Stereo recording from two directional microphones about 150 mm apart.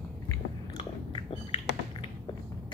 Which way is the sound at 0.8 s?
35° left (ahead or behind).